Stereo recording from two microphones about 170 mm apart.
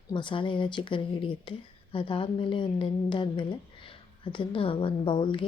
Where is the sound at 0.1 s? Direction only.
30° left (ahead or behind).